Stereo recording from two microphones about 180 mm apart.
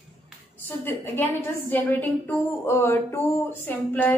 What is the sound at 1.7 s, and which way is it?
A woman's voice, 10° left (ahead or behind).